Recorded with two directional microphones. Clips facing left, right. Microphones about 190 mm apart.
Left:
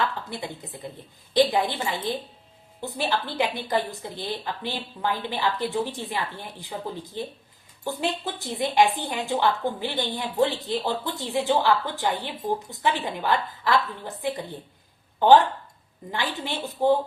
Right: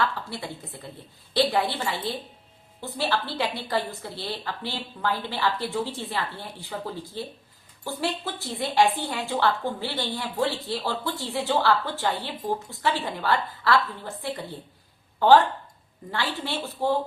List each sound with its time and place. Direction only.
0.0 s a woman's voice: 20° left (ahead or behind)